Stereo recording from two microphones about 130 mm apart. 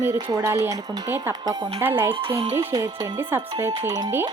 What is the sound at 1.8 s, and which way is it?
Speech, 15° right (ahead or behind).